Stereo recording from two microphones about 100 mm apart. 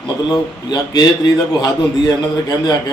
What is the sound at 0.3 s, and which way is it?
A man's voice, 45° left (ahead or behind).